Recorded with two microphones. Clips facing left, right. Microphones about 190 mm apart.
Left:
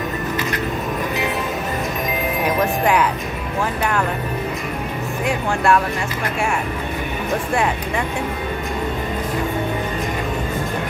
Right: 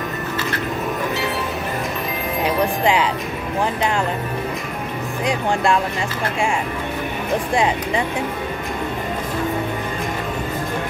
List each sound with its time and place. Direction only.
5.2 s speech: 15° right (ahead or behind)